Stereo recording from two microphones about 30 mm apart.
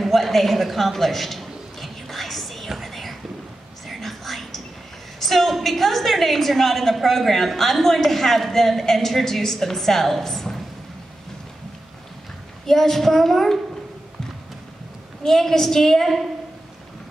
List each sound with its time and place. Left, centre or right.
0.0 s a sound: centre
2.8 s whispering: centre
5.2 s a woman's voice: centre
12.6 s a woman's voice: centre
15.2 s a woman's voice: centre